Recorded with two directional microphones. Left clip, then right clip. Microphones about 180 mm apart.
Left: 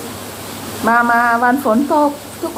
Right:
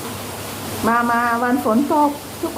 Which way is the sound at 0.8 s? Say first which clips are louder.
Left 5 dB; 15° right (ahead or behind).